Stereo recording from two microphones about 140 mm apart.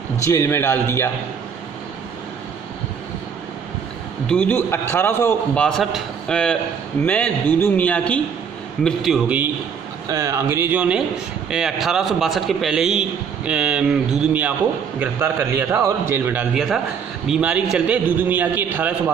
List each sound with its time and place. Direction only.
0.2 s a man's voice: 20° left (ahead or behind)
4.3 s a man's voice: 10° left (ahead or behind)
10.0 s a man's voice: 20° right (ahead or behind)
16.5 s a man's voice: 5° right (ahead or behind)